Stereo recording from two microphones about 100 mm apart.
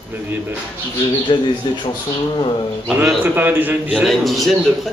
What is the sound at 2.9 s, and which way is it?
Speech, 20° right (ahead or behind).